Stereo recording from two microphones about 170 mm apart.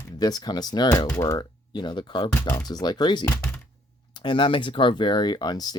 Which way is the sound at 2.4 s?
10° left (ahead or behind).